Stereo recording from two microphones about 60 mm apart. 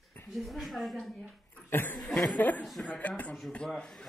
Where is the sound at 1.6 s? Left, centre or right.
Left.